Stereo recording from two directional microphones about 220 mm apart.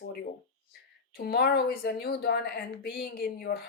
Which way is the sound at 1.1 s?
45° left (ahead or behind).